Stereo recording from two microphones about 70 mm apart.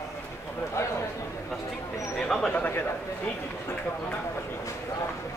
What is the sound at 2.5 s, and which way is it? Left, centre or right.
Speech, left.